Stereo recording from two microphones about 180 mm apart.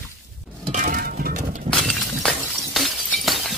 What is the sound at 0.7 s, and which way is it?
Music, 50° right (ahead or behind).